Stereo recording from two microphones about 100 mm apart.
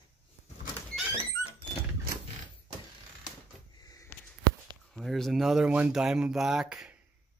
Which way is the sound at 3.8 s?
40° left (ahead or behind).